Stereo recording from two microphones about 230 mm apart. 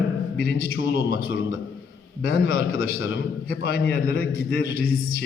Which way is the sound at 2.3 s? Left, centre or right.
Left.